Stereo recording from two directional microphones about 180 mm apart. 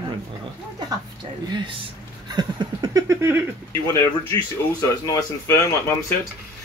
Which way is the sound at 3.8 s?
15° left (ahead or behind).